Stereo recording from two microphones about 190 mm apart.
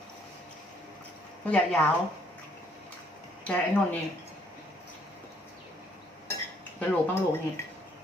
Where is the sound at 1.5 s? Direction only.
5° left (ahead or behind).